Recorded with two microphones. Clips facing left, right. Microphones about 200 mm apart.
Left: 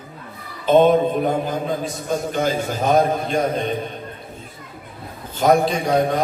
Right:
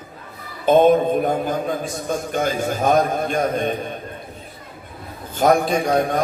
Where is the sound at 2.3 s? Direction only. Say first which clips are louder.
Right 1 dB; 50° right (ahead or behind).